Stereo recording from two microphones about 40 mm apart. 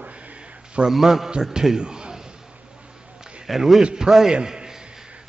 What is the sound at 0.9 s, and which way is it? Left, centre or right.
Speech, centre.